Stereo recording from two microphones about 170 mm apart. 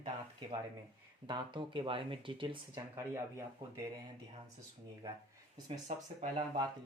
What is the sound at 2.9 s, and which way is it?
Speech, 15° right (ahead or behind).